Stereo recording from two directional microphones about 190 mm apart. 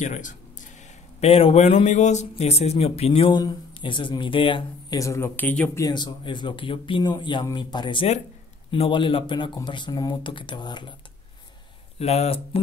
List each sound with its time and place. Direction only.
0.0 s speech: 40° left (ahead or behind)
1.2 s a man's voice: 30° left (ahead or behind); by 5.9 s 10° left (ahead or behind)
5.9 s a man's voice: 20° left (ahead or behind)
12.0 s speech: 35° left (ahead or behind)